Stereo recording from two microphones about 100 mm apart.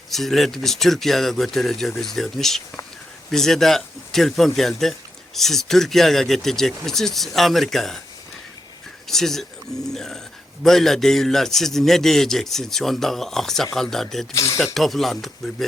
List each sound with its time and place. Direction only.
0.1 s speech: centre (ahead or behind)
9.0 s speech: 5° left (ahead or behind)
14.3 s speech: 30° left (ahead or behind)
14.6 s speech: centre (ahead or behind)